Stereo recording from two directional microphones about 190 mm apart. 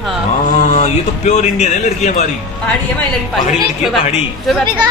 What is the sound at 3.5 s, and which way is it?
A woman's voice, centre (ahead or behind).